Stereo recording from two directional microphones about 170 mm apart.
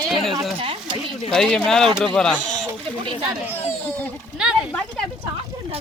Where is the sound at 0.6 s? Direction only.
30° right (ahead or behind).